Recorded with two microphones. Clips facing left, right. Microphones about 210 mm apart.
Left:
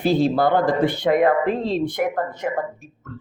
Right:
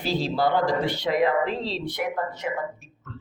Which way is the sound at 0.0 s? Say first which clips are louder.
Left 6 dB; 55° left (ahead or behind).